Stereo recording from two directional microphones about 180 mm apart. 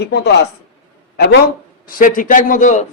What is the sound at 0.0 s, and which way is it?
A man's voice, 65° left (ahead or behind).